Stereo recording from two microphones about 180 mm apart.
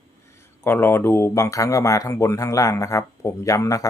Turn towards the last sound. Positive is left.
turn(degrees=20)  # may be behind; listen again after turning